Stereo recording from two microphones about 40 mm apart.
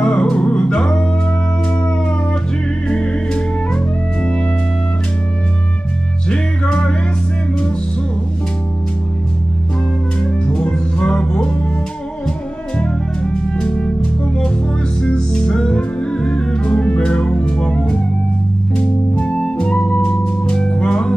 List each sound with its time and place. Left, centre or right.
0.0 s music: left
2.9 s music: left
6.2 s music: left
10.2 s music: left
13.2 s music: centre
15.0 s music: left
19.6 s music: left